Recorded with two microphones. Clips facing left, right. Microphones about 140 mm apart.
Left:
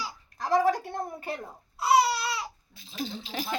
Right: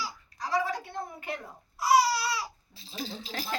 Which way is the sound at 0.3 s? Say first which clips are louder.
Left 6 dB; 50° left (ahead or behind).